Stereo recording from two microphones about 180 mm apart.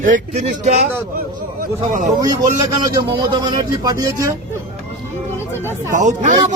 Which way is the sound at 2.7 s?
20° right (ahead or behind).